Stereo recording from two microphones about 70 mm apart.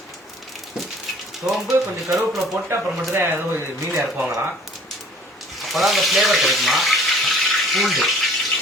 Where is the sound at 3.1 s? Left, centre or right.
Right.